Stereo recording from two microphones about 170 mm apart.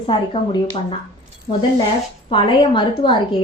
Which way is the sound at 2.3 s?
30° left (ahead or behind).